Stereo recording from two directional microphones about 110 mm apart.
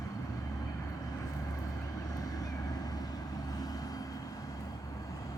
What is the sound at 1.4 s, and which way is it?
Vehicle, 30° left (ahead or behind).